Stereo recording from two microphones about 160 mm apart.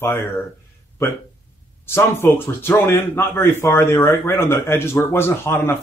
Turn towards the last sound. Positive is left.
turn(degrees=15)  # may be behind; listen again after turning